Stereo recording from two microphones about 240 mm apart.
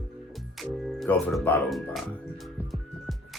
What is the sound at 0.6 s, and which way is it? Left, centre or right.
Speech, centre.